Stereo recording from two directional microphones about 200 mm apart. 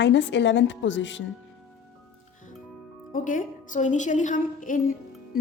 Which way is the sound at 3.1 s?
40° left (ahead or behind).